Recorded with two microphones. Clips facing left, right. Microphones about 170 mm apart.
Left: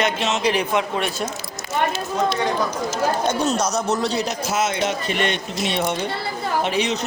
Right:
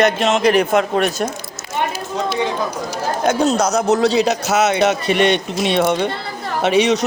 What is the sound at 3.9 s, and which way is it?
A man's voice, 85° right.